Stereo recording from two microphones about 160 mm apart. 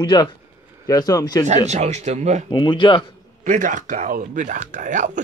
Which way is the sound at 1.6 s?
45° right (ahead or behind).